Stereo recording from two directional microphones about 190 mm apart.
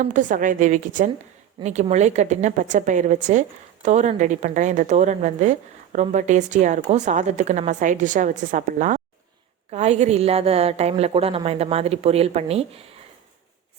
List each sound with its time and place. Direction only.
0.0 s a woman's voice: 40° right (ahead or behind)